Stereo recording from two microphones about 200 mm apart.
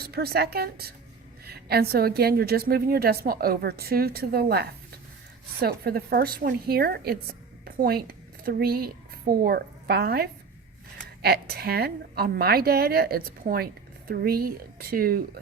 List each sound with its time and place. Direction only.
0.0 s a woman's voice: 50° right (ahead or behind)